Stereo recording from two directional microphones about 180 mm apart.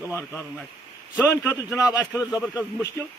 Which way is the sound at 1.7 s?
15° left (ahead or behind).